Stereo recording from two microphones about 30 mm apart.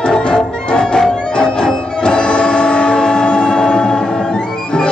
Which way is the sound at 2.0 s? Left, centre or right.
Left.